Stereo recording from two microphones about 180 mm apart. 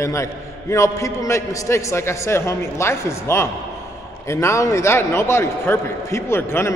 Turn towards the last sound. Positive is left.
turn(degrees=15)  # may be behind; listen again after turning